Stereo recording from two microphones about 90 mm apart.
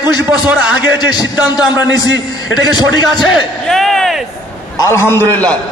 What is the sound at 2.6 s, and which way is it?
Speech, 50° left (ahead or behind).